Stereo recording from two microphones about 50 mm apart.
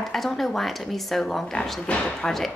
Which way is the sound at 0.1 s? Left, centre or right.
Centre.